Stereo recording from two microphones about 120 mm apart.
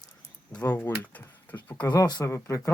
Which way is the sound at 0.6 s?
15° left (ahead or behind).